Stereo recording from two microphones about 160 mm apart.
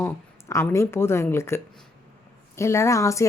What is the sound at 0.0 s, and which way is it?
Speech, 15° left (ahead or behind).